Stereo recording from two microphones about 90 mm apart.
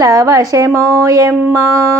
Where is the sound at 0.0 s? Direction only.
35° right (ahead or behind).